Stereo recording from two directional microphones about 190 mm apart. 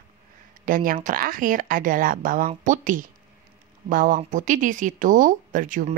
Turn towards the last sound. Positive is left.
turn(degrees=-45)  # may be behind; listen again after turning